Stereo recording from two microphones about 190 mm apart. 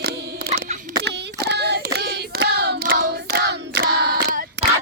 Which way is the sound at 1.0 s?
65° right (ahead or behind).